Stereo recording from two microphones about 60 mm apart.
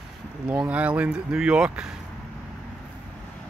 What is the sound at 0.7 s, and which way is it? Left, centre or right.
Speech, right.